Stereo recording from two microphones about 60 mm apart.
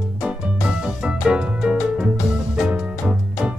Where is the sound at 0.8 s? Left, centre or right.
Centre.